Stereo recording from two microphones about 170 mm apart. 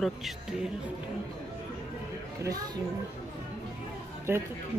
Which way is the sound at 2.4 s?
20° right (ahead or behind).